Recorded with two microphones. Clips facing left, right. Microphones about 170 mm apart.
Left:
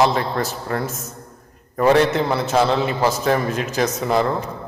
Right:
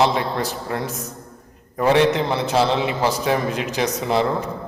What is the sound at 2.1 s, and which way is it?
A man's voice, 15° right (ahead or behind).